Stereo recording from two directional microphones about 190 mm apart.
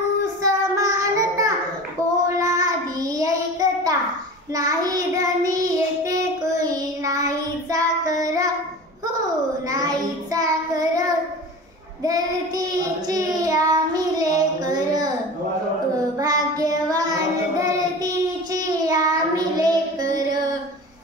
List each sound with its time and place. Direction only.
0.4 s child singing: 20° right (ahead or behind)
9.7 s child singing: 20° right (ahead or behind)
16.2 s child singing: 20° right (ahead or behind)